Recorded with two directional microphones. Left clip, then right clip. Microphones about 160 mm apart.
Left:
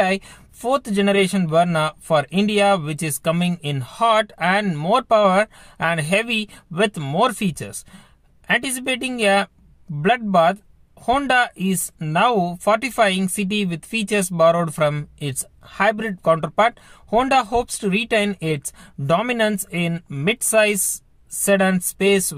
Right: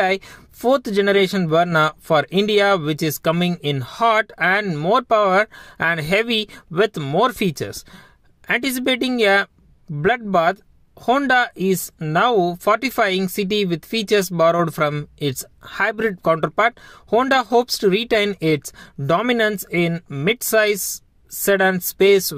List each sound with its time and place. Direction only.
0.0 s speech: 40° right (ahead or behind)
4.6 s speech: 35° right (ahead or behind)